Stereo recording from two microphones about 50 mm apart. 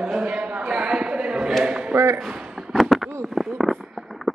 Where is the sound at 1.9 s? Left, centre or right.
Right.